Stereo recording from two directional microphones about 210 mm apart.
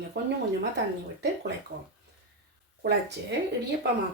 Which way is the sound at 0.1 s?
55° right (ahead or behind).